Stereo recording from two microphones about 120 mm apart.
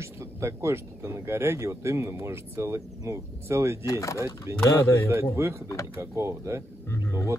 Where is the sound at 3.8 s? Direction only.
25° left (ahead or behind).